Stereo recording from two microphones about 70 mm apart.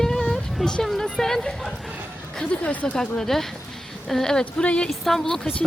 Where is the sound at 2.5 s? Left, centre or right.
Centre.